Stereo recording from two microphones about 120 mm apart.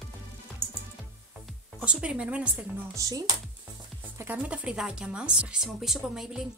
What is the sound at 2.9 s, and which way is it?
Speech, 30° right (ahead or behind).